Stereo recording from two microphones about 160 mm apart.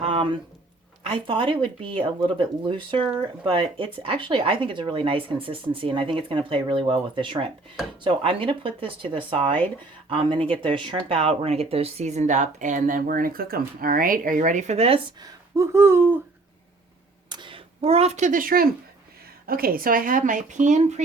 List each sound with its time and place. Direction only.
0.0 s a sound: 35° right (ahead or behind)
1.0 s speech: 35° right (ahead or behind)
15.5 s speech: 15° right (ahead or behind)
17.2 s speech: 30° right (ahead or behind); by 21.0 s 50° right (ahead or behind)